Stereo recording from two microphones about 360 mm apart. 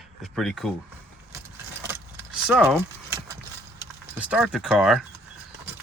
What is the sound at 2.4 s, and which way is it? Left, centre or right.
Speech, centre.